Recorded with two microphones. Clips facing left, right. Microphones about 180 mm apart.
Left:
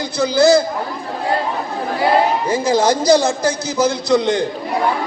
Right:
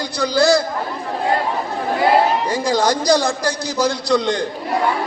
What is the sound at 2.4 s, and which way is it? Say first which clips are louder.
Speech: left 2 dB; 25° left (ahead or behind).